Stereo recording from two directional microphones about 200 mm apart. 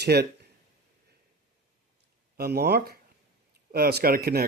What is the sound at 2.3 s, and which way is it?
Speech, 50° right (ahead or behind).